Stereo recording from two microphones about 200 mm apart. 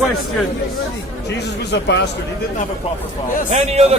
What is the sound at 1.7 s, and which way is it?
Speech, 60° left (ahead or behind).